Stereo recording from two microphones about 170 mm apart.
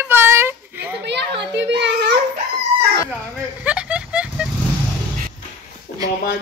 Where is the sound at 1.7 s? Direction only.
90° right.